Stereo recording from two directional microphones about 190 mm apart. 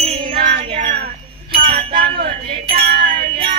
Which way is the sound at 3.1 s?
30° right (ahead or behind).